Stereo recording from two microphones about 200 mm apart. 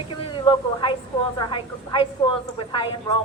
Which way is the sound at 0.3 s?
25° left (ahead or behind).